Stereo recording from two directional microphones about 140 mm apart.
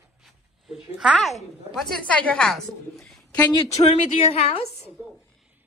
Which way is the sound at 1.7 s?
5° left (ahead or behind).